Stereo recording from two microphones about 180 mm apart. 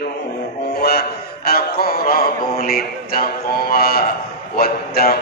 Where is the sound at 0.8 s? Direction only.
60° left (ahead or behind).